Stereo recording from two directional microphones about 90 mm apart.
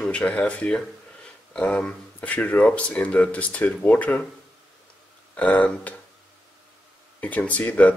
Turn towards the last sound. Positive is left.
turn(degrees=15)  # may be behind; listen again after turning